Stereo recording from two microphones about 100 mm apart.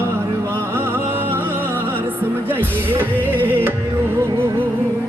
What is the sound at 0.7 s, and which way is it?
Music, 25° right (ahead or behind).